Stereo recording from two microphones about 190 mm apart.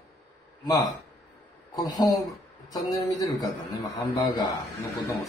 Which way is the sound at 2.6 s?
20° left (ahead or behind).